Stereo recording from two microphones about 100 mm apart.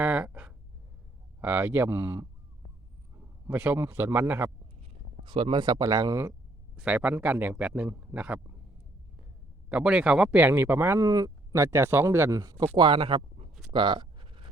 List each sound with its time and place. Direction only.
0.0 s a sound: 15° right (ahead or behind)
1.4 s a man's voice: 20° right (ahead or behind)
5.2 s speech: 55° right (ahead or behind)
6.7 s a man's voice: 15° right (ahead or behind)
9.6 s a man's voice: 10° right (ahead or behind)
11.0 s speech: 35° right (ahead or behind)
12.4 s a man's voice: 40° right (ahead or behind)
12.7 s speech: 55° right (ahead or behind); by 13.5 s 75° right (ahead or behind)
13.7 s a sound: 55° right (ahead or behind)